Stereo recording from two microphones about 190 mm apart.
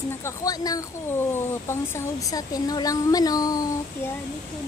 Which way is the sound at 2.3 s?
20° left (ahead or behind).